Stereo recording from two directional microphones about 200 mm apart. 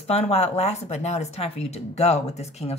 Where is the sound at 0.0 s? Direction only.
30° left (ahead or behind).